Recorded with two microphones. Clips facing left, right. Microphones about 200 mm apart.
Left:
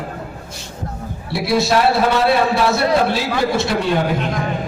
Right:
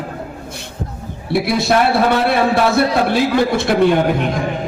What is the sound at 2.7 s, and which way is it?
A man's voice, 55° right (ahead or behind).